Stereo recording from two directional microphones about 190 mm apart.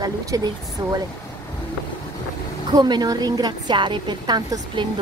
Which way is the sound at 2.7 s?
20° right (ahead or behind).